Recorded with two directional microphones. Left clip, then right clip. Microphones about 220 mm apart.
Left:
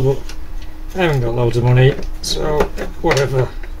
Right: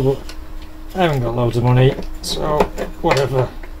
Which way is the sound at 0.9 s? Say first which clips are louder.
Even; 20° right (ahead or behind).